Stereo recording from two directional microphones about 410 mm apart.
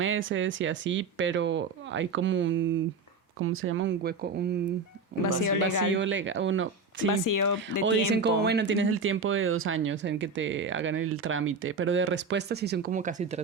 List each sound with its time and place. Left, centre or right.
0.0 s speech: right
5.2 s speech: left
5.9 s speech: right
7.1 s speech: left
8.1 s speech: right